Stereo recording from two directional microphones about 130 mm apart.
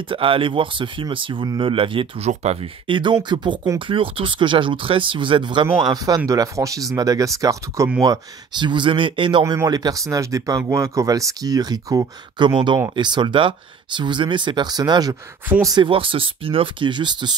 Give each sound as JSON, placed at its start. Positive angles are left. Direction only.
{"t": 0.1, "sound": "speech", "side_deg": -45}
{"t": 2.9, "sound": "speech", "side_deg": -40}
{"t": 9.4, "sound": "speech", "side_deg": -25}